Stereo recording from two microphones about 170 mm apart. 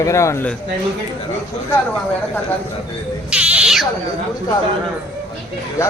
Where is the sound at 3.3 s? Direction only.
5° right (ahead or behind).